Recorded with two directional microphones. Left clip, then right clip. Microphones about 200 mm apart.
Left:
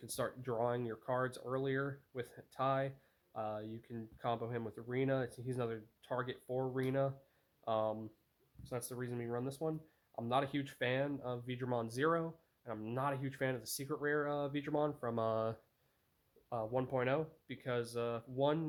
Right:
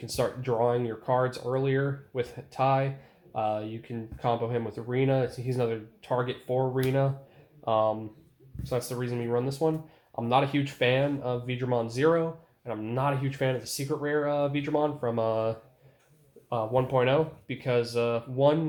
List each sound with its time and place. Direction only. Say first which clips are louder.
0.0 s speech: right 12 dB; 45° left (ahead or behind)